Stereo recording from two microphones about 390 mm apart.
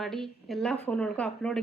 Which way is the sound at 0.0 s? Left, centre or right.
Centre.